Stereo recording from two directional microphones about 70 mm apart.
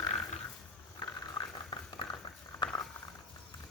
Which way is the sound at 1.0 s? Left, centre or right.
Left.